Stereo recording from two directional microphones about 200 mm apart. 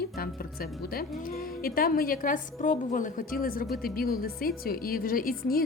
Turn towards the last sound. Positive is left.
turn(degrees=45)  # may be behind; listen again after turning